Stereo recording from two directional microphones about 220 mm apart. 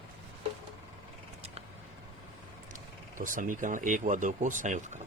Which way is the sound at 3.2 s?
35° right (ahead or behind).